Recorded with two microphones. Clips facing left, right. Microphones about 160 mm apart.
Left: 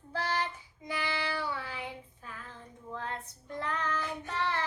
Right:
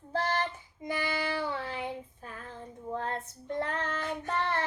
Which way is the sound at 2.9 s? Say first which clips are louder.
Right 5 dB; 45° right (ahead or behind).